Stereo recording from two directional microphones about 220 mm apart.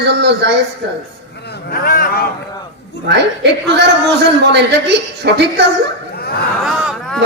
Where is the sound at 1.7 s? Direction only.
40° left (ahead or behind).